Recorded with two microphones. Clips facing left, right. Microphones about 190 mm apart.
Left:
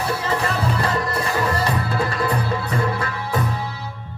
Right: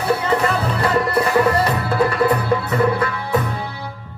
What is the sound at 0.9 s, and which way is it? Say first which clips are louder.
Music: right 5 dB; 60° right (ahead or behind).